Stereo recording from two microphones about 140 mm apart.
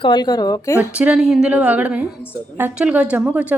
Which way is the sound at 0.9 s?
5° right (ahead or behind).